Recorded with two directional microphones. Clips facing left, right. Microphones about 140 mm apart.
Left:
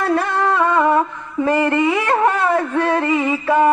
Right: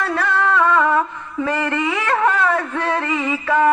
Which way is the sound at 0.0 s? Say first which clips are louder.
Left 2 dB; 15° left (ahead or behind).